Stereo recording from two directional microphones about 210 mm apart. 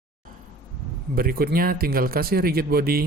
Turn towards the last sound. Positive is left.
turn(degrees=-45)  # may be behind; listen again after turning